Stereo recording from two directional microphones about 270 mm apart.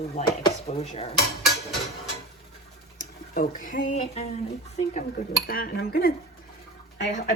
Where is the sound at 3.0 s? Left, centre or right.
Left.